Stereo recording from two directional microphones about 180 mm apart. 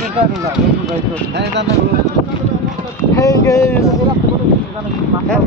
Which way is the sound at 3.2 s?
15° left (ahead or behind).